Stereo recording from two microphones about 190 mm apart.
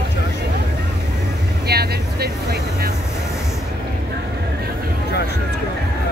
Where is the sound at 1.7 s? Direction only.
55° right (ahead or behind).